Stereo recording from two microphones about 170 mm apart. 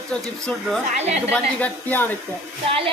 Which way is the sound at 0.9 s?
40° right (ahead or behind).